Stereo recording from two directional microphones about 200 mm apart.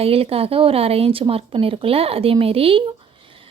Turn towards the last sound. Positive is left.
turn(degrees=-25)  # may be behind; listen again after turning